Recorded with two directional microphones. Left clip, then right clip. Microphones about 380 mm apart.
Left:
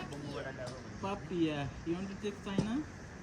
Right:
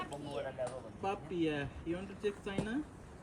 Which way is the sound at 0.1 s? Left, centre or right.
Centre.